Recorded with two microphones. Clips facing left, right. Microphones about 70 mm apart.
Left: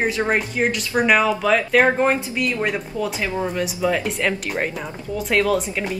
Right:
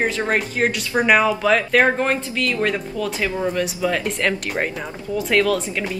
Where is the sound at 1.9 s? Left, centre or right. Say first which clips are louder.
Left 2 dB; centre.